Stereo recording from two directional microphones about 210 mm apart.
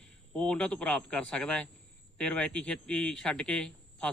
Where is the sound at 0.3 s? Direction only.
5° left (ahead or behind).